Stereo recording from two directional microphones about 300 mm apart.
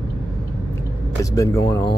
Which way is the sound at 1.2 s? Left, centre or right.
Centre.